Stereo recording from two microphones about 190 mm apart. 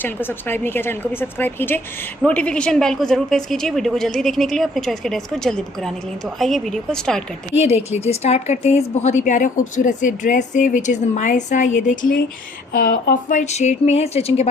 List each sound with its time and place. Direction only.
0.0 s a woman's voice: 10° left (ahead or behind)
7.7 s a woman's voice: 35° left (ahead or behind)